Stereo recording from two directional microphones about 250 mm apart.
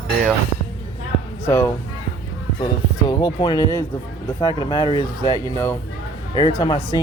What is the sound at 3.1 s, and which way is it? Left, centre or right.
Speech, centre.